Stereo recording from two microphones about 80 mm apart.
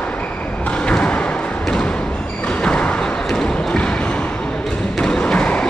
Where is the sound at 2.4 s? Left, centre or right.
Centre.